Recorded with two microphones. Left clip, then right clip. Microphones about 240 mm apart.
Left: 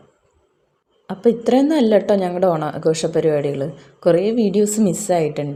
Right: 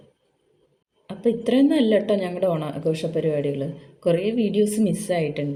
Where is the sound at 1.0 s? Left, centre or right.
Centre.